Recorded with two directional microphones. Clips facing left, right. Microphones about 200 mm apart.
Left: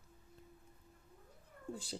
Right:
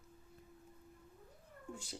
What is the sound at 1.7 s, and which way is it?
Speech, 30° left (ahead or behind).